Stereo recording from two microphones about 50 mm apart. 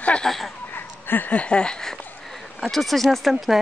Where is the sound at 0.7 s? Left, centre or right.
Left.